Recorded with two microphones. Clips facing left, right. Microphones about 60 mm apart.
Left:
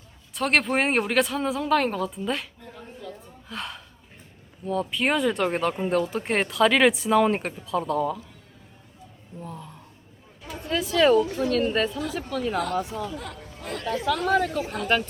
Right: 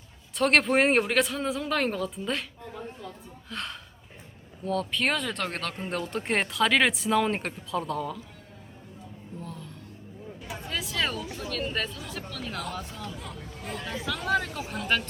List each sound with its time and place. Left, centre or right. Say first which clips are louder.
0.3 s speech: right 1 dB; centre
3.5 s speech: left 2 dB; centre
5.9 s speech: left 5 dB; centre
9.4 s a sound: left 4 dB; centre
10.7 s speech: left 11 dB; centre
13.1 s speech: left 3 dB; left
14.3 s speech: left 3 dB; centre
14.6 s speech: left 5 dB; left